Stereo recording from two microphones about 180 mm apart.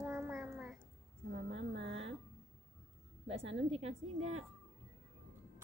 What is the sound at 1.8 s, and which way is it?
Speech, 35° right (ahead or behind).